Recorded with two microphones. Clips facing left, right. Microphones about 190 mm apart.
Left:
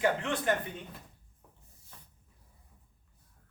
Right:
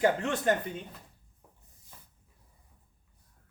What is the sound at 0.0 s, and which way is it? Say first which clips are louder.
Speech: right 3 dB; 40° right (ahead or behind).